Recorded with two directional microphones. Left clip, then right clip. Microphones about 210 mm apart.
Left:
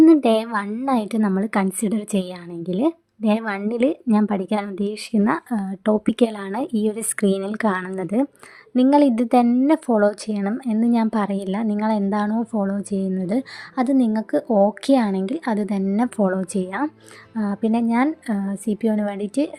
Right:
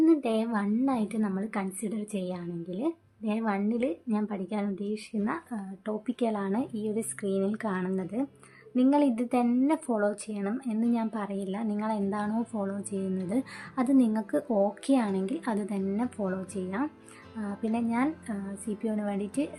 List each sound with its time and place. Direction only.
0.0 s a woman's voice: 50° left (ahead or behind); by 19.5 s 35° left (ahead or behind)